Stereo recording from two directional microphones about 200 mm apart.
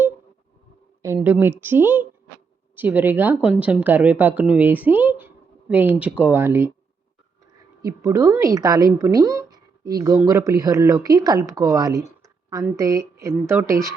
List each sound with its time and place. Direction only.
1.0 s speech: 10° right (ahead or behind)
7.9 s speech: 15° right (ahead or behind)